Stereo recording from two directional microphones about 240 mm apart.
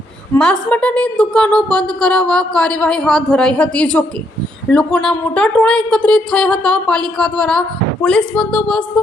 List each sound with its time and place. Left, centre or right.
0.3 s a woman's voice: centre